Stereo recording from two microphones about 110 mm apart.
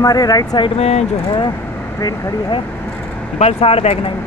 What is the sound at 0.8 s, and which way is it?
Speech, 75° left (ahead or behind).